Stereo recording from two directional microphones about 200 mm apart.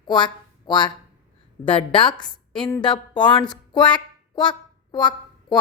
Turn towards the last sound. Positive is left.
turn(degrees=20)  # may be behind; listen again after turning